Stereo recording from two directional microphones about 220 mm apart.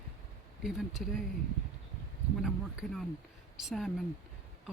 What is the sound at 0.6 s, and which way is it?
Speech, centre (ahead or behind).